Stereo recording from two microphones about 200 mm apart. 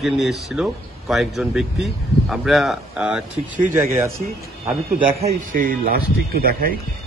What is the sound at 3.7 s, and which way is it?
Speech, 15° right (ahead or behind).